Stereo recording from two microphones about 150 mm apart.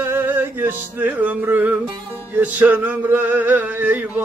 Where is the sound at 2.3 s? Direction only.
10° right (ahead or behind).